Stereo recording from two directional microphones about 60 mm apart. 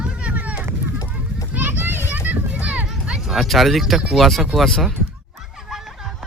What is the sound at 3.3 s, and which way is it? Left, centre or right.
Speech, centre.